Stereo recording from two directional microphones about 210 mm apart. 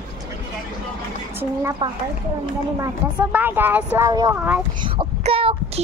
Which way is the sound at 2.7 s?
10° right (ahead or behind).